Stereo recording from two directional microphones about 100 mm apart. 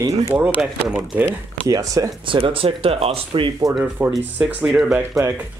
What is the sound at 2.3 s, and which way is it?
Speech, 65° right (ahead or behind).